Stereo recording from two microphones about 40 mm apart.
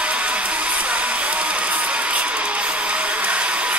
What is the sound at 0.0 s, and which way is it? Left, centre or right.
Music, right.